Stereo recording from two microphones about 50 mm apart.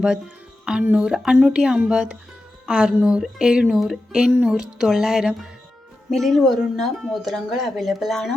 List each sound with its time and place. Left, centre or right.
0.6 s speech: centre
3.7 s speech: centre
6.1 s speech: centre